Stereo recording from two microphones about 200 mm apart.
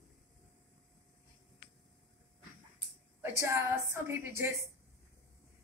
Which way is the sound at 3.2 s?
15° right (ahead or behind).